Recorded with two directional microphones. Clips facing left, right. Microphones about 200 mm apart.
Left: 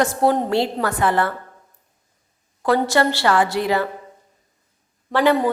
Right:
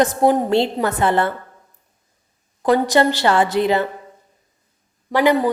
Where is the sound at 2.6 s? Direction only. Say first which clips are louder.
Right 3 dB; 20° right (ahead or behind).